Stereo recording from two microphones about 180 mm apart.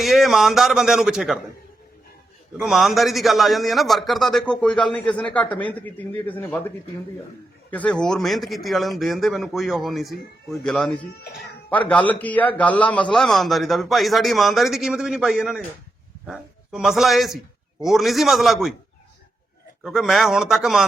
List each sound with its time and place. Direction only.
0.0 s a man's voice: centre (ahead or behind)
2.6 s a man's voice: centre (ahead or behind)
11.3 s cat: centre (ahead or behind)
11.9 s a man's voice: 10° left (ahead or behind)
19.8 s a man's voice: centre (ahead or behind)